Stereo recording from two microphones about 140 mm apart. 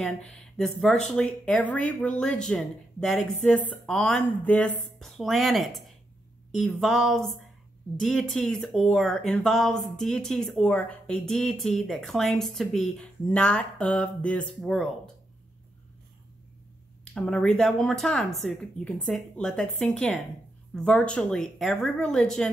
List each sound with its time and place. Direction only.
0.0 s speech: centre (ahead or behind)
17.0 s speech: 5° left (ahead or behind)